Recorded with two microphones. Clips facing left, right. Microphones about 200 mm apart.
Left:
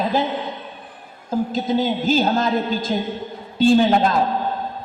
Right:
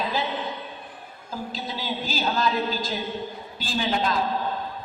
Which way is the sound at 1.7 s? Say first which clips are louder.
Left 13 dB; 50° left (ahead or behind).